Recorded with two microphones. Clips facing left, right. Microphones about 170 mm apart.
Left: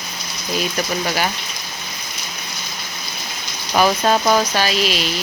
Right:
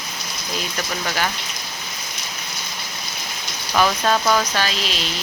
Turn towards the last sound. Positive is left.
turn(degrees=10)  # may be behind; listen again after turning